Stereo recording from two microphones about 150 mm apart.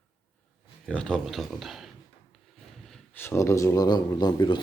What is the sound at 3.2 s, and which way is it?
Speech, 20° left (ahead or behind).